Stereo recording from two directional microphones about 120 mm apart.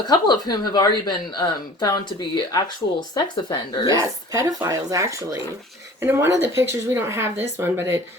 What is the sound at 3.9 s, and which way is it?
Speech, 25° right (ahead or behind).